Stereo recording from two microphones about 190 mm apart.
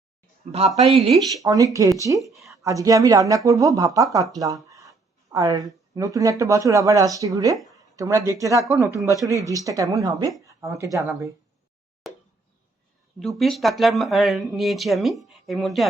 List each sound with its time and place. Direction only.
0.4 s speech: 40° right (ahead or behind)
1.3 s speech: 20° right (ahead or behind)
2.2 s speech: centre (ahead or behind)
2.6 s speech: 20° right (ahead or behind)
12.0 s plop: centre (ahead or behind)
13.1 s speech: centre (ahead or behind)